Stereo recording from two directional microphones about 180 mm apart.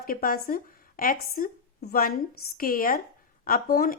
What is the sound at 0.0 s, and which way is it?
Speech, 55° left (ahead or behind).